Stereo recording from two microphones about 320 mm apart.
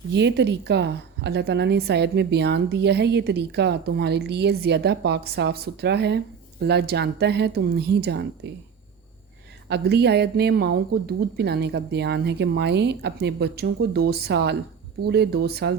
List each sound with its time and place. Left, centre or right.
0.1 s a woman's voice: right
9.6 s a woman's voice: right